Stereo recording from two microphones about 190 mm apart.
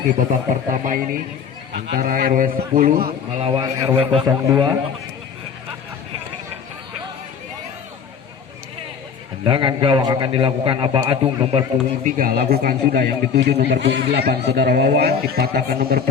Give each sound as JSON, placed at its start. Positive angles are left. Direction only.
{"t": 0.1, "sound": "a man's voice", "side_deg": -45}
{"t": 3.1, "sound": "a man's voice", "side_deg": -30}
{"t": 3.8, "sound": "a man's voice", "side_deg": -15}
{"t": 4.0, "sound": "a man's voice", "side_deg": -30}
{"t": 9.4, "sound": "a man's voice", "side_deg": -25}
{"t": 12.0, "sound": "a man's voice", "side_deg": -45}